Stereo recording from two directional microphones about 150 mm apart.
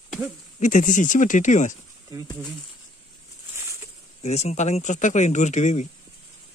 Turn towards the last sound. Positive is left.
turn(degrees=50)  # may be behind; listen again after turning